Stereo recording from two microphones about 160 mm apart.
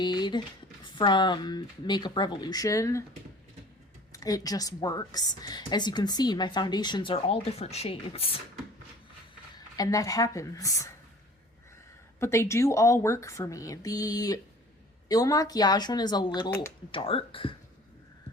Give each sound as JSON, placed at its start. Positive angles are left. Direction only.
{"t": 0.0, "sound": "a woman's voice", "side_deg": 30}
{"t": 4.1, "sound": "a woman's voice", "side_deg": 20}
{"t": 9.6, "sound": "a woman's voice", "side_deg": 25}
{"t": 12.2, "sound": "a woman's voice", "side_deg": 15}